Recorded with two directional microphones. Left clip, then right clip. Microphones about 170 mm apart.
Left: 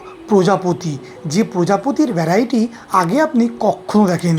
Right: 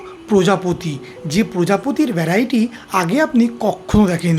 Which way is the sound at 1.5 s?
10° right (ahead or behind).